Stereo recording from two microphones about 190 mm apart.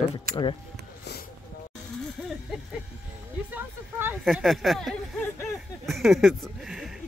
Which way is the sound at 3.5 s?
10° right (ahead or behind).